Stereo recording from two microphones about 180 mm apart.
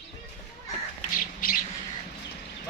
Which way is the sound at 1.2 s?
50° left (ahead or behind).